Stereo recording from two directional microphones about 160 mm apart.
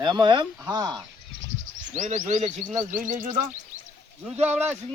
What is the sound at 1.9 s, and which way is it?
Chirp, 50° right (ahead or behind).